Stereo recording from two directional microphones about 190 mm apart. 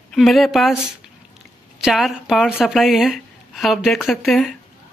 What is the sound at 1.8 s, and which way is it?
A woman's voice, centre (ahead or behind).